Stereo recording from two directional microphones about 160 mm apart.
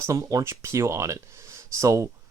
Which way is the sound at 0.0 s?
20° right (ahead or behind).